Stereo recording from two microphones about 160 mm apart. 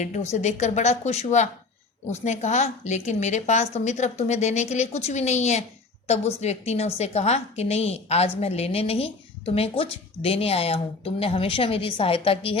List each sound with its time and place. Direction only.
0.0 s a woman's voice: 45° left (ahead or behind)